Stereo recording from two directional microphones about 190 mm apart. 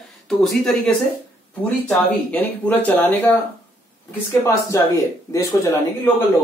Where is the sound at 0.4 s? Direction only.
Centre (ahead or behind).